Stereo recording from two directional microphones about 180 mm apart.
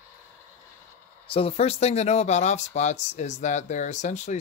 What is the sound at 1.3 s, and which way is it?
Speech, 35° left (ahead or behind).